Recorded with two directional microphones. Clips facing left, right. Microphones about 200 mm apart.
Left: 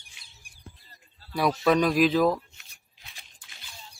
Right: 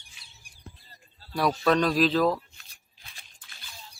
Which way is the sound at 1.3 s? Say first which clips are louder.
Left 1 dB; 10° left (ahead or behind).